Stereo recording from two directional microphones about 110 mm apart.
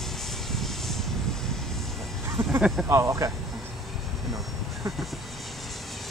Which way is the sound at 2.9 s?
25° right (ahead or behind).